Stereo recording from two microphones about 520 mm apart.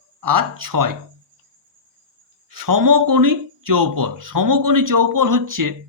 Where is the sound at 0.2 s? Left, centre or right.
Right.